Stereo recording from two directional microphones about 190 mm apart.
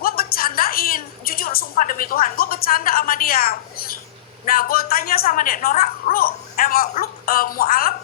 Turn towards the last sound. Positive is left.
turn(degrees=50)  # may be behind; listen again after turning